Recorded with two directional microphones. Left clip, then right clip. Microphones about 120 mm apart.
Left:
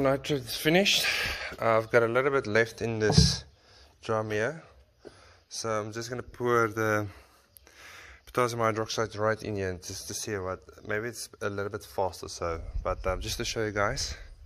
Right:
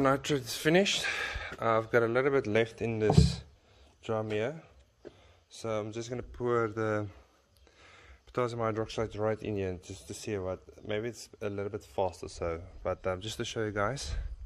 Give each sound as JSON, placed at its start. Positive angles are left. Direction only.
{"t": 0.0, "sound": "speech", "side_deg": 0}
{"t": 2.3, "sound": "speech", "side_deg": -30}
{"t": 2.9, "sound": "speech", "side_deg": -5}
{"t": 6.4, "sound": "speech", "side_deg": 0}
{"t": 7.8, "sound": "a sound", "side_deg": 0}
{"t": 8.7, "sound": "speech", "side_deg": -15}
{"t": 9.8, "sound": "speech", "side_deg": -45}
{"t": 10.0, "sound": "speech", "side_deg": -15}
{"t": 10.3, "sound": "speech", "side_deg": -30}
{"t": 11.3, "sound": "speech", "side_deg": -5}
{"t": 11.9, "sound": "speech", "side_deg": -30}
{"t": 13.9, "sound": "speech", "side_deg": -35}